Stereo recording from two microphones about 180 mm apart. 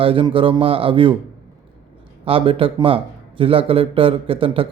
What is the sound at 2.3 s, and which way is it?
A man's voice, 30° right (ahead or behind).